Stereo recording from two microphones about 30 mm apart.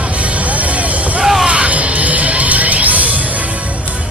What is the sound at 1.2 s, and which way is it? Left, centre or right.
Music, centre.